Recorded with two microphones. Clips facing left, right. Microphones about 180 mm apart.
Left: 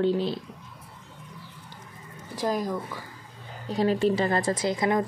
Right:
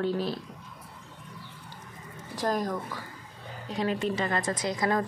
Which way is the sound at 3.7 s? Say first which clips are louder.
Left 6 dB; 35° left (ahead or behind).